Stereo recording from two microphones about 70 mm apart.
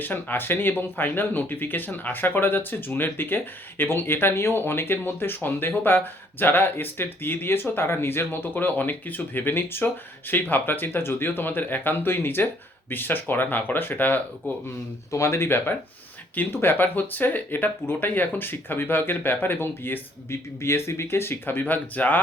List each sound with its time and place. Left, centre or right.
0.0 s speech: left
15.1 s speech: left